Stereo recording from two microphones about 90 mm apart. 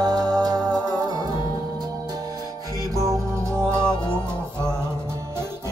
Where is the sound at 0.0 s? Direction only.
45° right (ahead or behind).